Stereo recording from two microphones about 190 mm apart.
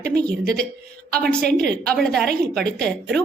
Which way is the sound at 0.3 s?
5° left (ahead or behind).